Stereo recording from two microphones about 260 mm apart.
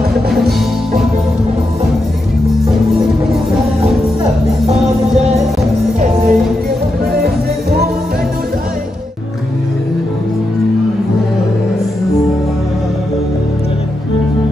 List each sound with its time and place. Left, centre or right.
4.6 s music: right